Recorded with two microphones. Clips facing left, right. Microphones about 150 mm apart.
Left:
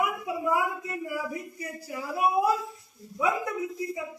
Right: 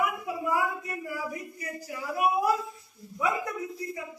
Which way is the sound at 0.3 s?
20° left (ahead or behind).